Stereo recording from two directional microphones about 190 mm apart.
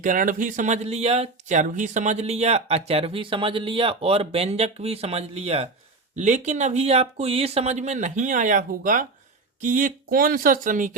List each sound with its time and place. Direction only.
0.0 s speech: 45° right (ahead or behind)